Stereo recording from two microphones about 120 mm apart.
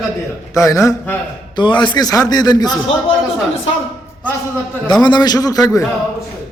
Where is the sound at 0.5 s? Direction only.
25° left (ahead or behind).